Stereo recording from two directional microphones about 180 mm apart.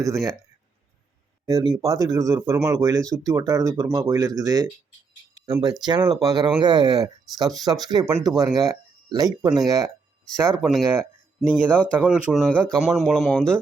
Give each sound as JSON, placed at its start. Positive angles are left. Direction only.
{"t": 0.0, "sound": "speech", "side_deg": -20}
{"t": 1.5, "sound": "speech", "side_deg": -20}
{"t": 10.6, "sound": "speech", "side_deg": 0}